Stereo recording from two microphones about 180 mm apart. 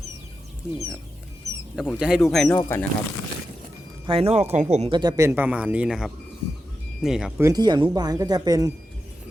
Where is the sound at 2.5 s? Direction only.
15° left (ahead or behind).